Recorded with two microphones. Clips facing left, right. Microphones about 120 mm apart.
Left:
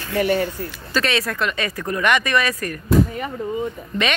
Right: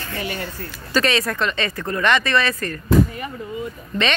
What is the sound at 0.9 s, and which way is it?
Speech, centre (ahead or behind).